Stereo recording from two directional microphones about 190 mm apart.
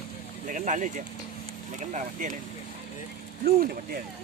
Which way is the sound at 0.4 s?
45° right (ahead or behind).